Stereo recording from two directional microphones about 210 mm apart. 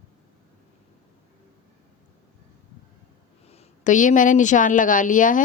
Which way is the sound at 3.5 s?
35° left (ahead or behind).